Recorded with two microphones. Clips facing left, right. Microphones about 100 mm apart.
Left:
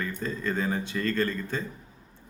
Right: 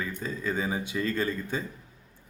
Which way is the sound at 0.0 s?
5° right (ahead or behind).